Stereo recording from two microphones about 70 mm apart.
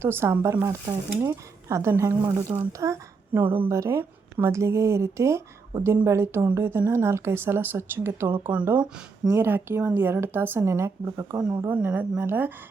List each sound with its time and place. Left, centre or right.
0.0 s speech: right
3.3 s a woman's voice: right
3.7 s speech: right
11.3 s a woman's voice: right